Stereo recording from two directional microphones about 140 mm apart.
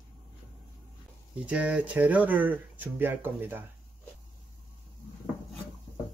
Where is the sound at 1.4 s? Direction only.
10° right (ahead or behind).